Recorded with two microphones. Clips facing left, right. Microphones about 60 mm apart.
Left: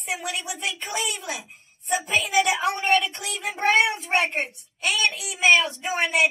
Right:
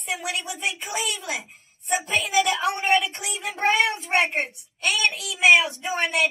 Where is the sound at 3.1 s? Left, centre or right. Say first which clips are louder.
Even; right.